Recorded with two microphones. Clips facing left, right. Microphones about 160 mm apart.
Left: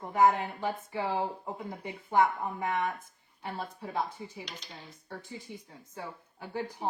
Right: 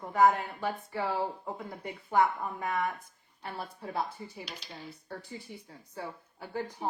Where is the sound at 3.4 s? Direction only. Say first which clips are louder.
Left 2 dB; 20° left (ahead or behind).